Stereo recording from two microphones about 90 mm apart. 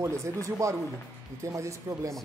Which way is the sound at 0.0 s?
35° right (ahead or behind).